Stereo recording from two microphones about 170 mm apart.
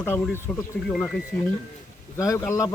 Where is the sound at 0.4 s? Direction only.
5° left (ahead or behind).